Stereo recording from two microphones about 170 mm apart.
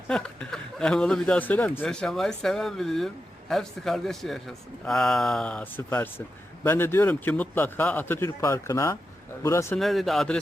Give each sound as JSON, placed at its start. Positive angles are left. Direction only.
{"t": 0.1, "sound": "speech", "side_deg": 5}
{"t": 9.7, "sound": "speech", "side_deg": 0}